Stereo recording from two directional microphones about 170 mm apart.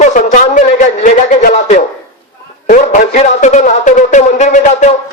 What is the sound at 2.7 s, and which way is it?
Music, 45° left (ahead or behind).